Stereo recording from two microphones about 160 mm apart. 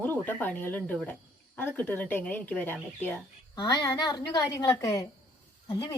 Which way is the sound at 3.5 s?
20° left (ahead or behind).